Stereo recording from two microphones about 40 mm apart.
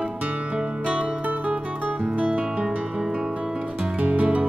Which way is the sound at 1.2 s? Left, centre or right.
Right.